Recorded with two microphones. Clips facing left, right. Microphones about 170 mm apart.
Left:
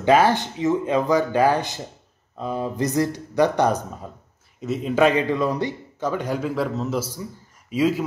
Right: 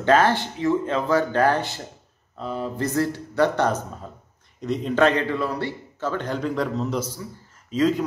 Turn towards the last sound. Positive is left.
turn(degrees=10)  # may be behind; listen again after turning